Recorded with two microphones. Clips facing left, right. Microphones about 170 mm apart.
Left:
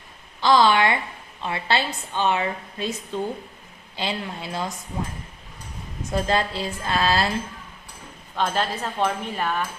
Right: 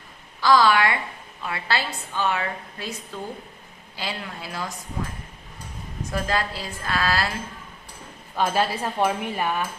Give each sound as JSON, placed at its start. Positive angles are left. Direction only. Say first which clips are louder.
{"t": 0.4, "sound": "a woman's voice", "louder": "left 1 dB", "side_deg": 25}
{"t": 6.1, "sound": "a woman's voice", "louder": "left 3 dB", "side_deg": 25}
{"t": 8.4, "sound": "speech", "louder": "right 2 dB", "side_deg": -10}